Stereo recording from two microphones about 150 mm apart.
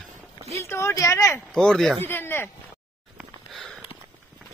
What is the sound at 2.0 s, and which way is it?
Speech, 15° left (ahead or behind).